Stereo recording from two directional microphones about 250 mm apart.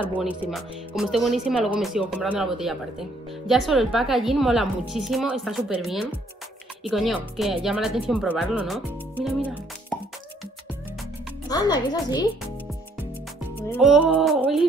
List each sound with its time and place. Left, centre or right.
0.0 s speech: centre
11.4 s a woman's voice: centre
13.6 s speech: centre